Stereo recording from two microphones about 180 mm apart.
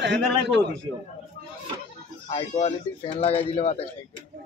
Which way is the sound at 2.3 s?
35° left (ahead or behind).